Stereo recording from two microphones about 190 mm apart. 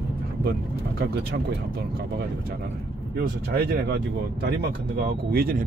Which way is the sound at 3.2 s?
55° right (ahead or behind).